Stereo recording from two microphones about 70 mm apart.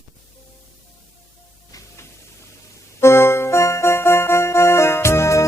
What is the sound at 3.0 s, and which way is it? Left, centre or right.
Music, left.